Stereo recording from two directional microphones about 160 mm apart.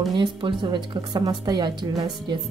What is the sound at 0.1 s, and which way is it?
A woman's voice, 30° right (ahead or behind).